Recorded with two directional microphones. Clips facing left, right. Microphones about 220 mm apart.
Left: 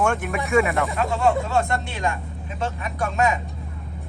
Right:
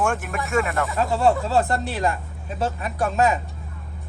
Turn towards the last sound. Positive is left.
turn(degrees=-35)  # may be behind; listen again after turning